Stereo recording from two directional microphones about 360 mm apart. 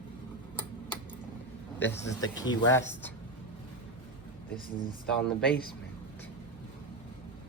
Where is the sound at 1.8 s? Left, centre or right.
Centre.